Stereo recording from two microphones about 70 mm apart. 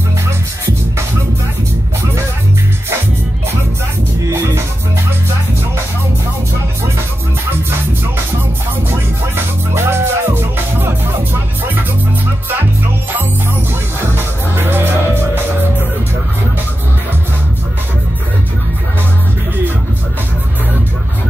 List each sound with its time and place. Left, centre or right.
4.3 s music: right
9.8 s music: right
14.0 s music: right